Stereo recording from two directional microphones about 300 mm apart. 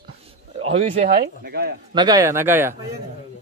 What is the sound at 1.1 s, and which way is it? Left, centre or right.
Speech, right.